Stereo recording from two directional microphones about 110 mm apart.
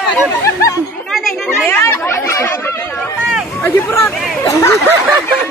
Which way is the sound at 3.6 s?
25° left (ahead or behind).